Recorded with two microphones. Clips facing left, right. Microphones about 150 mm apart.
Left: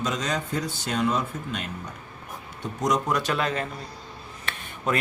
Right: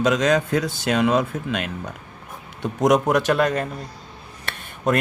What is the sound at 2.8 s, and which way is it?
Speech, 55° right (ahead or behind).